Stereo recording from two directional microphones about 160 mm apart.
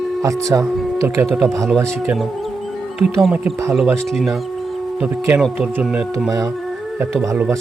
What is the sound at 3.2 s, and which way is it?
Speech, 5° right (ahead or behind).